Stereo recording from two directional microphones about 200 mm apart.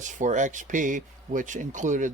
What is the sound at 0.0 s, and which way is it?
Speech, 40° right (ahead or behind).